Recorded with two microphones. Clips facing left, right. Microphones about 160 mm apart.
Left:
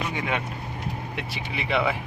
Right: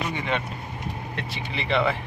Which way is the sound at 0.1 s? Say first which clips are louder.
Even; 5° left (ahead or behind).